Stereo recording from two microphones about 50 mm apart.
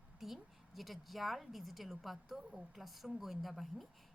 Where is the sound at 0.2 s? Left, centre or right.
Centre.